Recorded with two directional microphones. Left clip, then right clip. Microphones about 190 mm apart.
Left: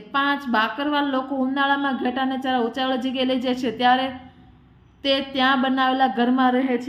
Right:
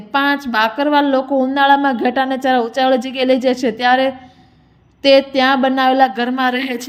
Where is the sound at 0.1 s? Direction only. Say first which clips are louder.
Right 5 dB; 40° right (ahead or behind).